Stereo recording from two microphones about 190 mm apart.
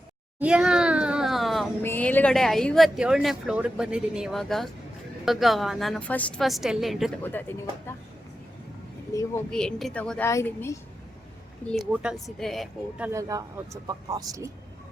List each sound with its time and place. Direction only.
0.3 s a sound: 5° right (ahead or behind)
1.8 s speech: 10° left (ahead or behind)
7.2 s a woman's voice: 10° left (ahead or behind)
9.1 s a woman's voice: 15° left (ahead or behind)
9.5 s a woman's voice: 5° left (ahead or behind)
11.7 s speech: centre (ahead or behind)
13.1 s speech: 15° right (ahead or behind)